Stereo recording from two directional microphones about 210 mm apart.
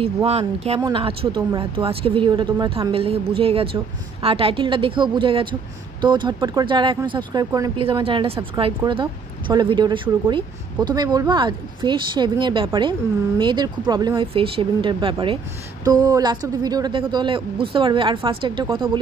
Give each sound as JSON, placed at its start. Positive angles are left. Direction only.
{"t": 0.0, "sound": "speech", "side_deg": -30}